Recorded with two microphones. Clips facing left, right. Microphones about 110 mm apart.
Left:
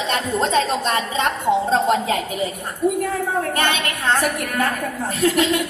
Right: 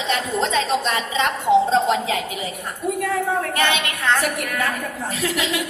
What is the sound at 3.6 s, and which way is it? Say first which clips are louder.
A woman's voice: even; 45° left (ahead or behind).